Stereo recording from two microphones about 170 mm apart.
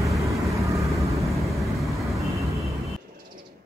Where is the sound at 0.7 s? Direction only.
20° right (ahead or behind).